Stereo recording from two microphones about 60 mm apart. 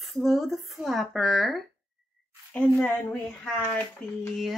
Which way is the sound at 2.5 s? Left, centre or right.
Left.